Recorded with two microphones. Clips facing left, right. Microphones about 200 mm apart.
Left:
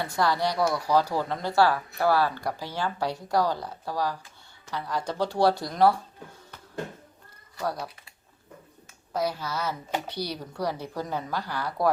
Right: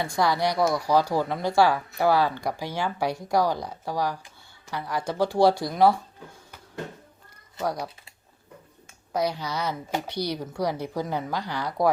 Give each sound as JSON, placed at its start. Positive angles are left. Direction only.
{"t": 0.0, "sound": "speech", "side_deg": -15}
{"t": 7.5, "sound": "speech", "side_deg": -15}
{"t": 9.1, "sound": "speech", "side_deg": -15}